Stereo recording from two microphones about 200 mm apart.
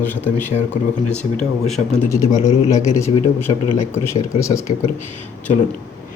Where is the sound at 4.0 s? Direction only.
30° left (ahead or behind).